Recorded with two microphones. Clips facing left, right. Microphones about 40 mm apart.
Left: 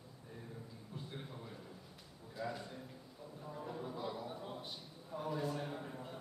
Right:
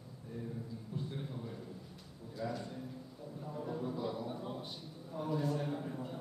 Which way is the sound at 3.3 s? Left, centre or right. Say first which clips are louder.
Right 4 dB; centre.